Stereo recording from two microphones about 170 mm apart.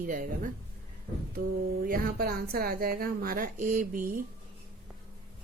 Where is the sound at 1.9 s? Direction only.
60° right (ahead or behind).